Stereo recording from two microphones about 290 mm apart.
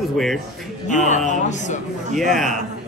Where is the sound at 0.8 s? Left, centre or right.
Left.